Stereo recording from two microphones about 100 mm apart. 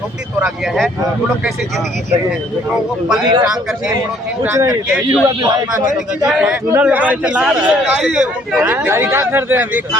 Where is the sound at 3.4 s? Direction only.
5° right (ahead or behind).